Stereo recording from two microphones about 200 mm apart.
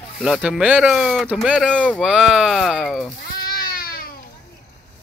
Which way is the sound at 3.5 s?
50° left (ahead or behind).